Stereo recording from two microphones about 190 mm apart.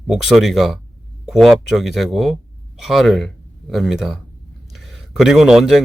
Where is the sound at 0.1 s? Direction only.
Centre (ahead or behind).